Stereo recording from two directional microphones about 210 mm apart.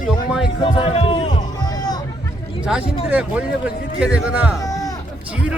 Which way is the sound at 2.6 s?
5° right (ahead or behind).